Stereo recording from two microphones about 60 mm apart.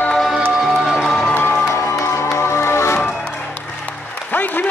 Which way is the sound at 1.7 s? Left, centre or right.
Left.